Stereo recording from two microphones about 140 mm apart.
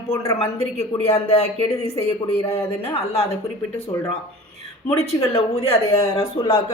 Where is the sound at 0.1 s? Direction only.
20° left (ahead or behind).